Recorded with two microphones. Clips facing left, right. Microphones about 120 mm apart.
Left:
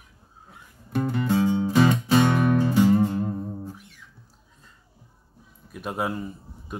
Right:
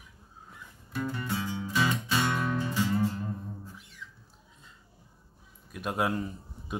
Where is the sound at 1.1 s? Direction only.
65° left (ahead or behind).